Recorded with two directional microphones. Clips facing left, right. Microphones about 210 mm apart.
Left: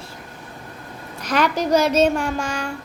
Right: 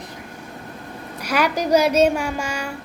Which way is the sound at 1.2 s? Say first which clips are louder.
Left 1 dB; 10° right (ahead or behind).